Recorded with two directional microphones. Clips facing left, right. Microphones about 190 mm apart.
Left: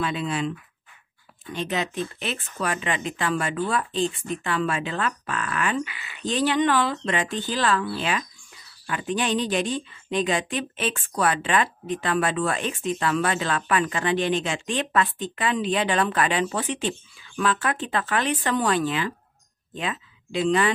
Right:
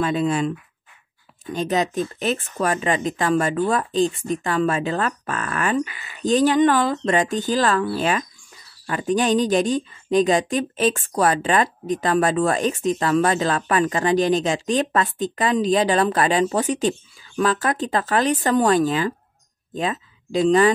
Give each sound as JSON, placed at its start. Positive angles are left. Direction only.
{"t": 0.0, "sound": "speech", "side_deg": -45}